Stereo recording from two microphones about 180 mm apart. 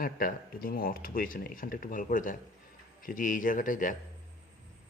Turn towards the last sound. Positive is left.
turn(degrees=45)  # may be behind; listen again after turning